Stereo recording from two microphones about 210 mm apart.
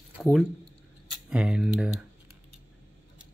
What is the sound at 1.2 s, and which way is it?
Speech, 5° right (ahead or behind).